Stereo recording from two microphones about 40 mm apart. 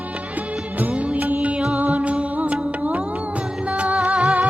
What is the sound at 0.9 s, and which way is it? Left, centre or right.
Music, right.